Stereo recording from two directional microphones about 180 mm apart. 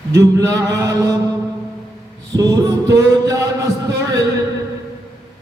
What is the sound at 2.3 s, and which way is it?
Mantra, 20° right (ahead or behind).